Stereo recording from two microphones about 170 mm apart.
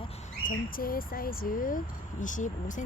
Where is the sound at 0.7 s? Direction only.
55° left (ahead or behind).